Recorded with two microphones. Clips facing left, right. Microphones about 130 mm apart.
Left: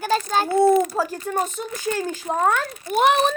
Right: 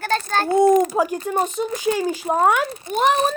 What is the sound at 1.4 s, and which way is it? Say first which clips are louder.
Speech: right 2 dB; 40° right (ahead or behind).